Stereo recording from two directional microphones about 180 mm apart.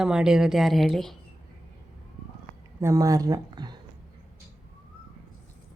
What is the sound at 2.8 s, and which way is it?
Speech, 20° right (ahead or behind).